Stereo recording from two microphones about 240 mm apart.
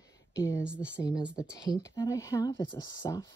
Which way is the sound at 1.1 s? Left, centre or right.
Centre.